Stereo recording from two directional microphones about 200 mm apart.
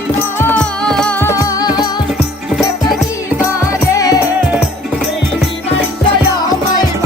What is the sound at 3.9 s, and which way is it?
Music, 15° left (ahead or behind).